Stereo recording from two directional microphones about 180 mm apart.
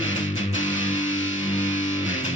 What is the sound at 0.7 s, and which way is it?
Music, 45° left (ahead or behind).